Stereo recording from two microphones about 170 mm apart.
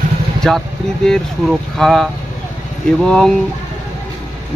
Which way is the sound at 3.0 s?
5° left (ahead or behind).